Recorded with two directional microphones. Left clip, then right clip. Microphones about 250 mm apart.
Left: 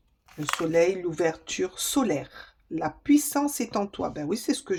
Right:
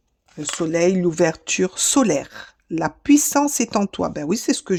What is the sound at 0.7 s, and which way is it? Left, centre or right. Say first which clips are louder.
Speech: right 5 dB; right.